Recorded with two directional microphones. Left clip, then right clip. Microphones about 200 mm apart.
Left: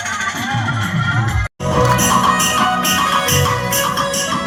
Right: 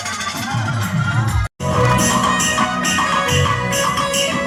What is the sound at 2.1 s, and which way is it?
Music, 30° left (ahead or behind).